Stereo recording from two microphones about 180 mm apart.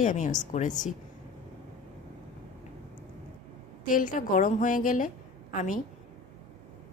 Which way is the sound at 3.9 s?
50° left (ahead or behind).